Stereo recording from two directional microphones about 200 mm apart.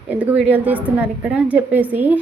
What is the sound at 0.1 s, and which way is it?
A woman's voice, 5° right (ahead or behind).